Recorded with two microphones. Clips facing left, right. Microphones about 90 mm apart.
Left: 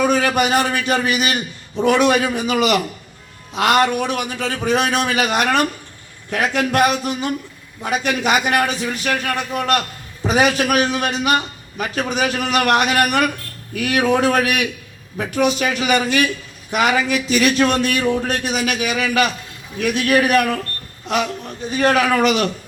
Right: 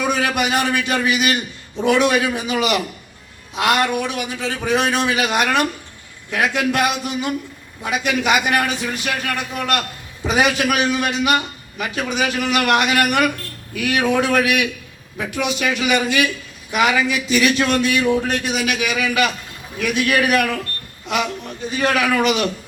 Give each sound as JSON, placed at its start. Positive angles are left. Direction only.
{"t": 0.0, "sound": "a man's voice", "side_deg": 40}
{"t": 3.5, "sound": "a man's voice", "side_deg": 45}
{"t": 21.7, "sound": "a man's voice", "side_deg": 40}